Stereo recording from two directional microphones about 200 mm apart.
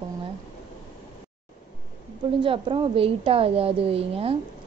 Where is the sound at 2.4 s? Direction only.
25° right (ahead or behind).